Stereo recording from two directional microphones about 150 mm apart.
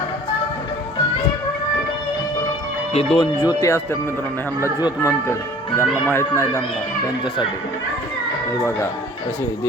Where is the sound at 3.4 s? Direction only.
25° left (ahead or behind).